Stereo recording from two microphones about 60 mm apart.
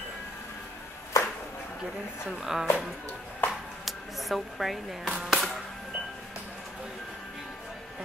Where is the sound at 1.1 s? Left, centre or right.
Left.